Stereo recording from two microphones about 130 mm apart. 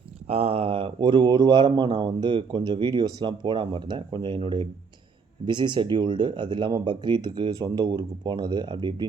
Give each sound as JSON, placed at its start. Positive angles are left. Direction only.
{"t": 0.3, "sound": "speech", "side_deg": -50}